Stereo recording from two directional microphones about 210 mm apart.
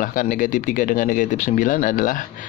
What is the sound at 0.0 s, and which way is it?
Speech, 40° left (ahead or behind).